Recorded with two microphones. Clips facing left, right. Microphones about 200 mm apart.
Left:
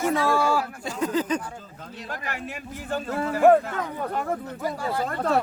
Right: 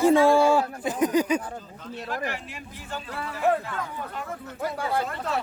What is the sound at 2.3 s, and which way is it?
Speech, 50° left (ahead or behind).